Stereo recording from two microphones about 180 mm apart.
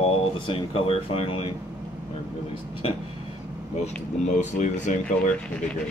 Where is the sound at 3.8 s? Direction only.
40° left (ahead or behind).